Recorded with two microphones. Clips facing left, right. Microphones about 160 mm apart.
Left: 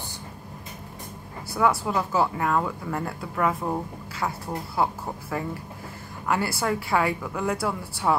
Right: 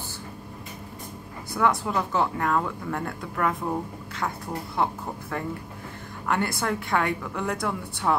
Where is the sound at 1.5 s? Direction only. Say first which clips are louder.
Left 1 dB; 5° left (ahead or behind).